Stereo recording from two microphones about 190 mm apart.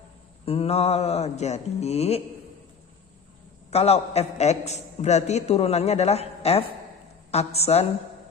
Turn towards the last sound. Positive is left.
turn(degrees=35)  # may be behind; listen again after turning